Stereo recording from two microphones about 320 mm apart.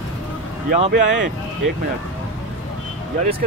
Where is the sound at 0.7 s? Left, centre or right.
Right.